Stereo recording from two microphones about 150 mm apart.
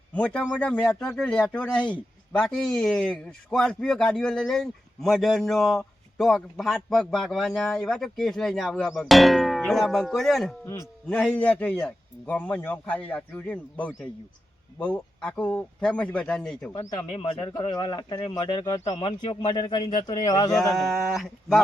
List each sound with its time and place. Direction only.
0.1 s a man's voice: 5° left (ahead or behind)
16.7 s speech: 30° left (ahead or behind)
20.7 s speech: centre (ahead or behind)